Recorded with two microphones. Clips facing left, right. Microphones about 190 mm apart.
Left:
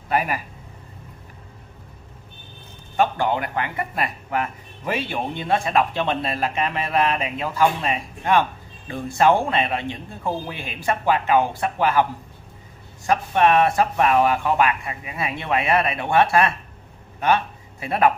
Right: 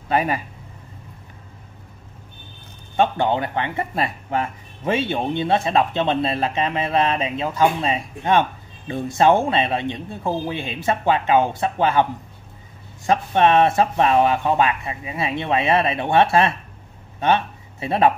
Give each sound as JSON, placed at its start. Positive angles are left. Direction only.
{"t": 0.1, "sound": "speech", "side_deg": -25}
{"t": 3.0, "sound": "speech", "side_deg": -25}